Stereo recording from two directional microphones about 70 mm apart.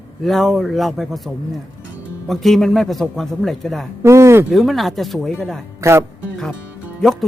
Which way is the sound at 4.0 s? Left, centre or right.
Right.